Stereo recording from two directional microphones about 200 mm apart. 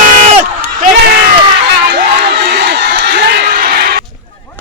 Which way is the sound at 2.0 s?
55° right (ahead or behind).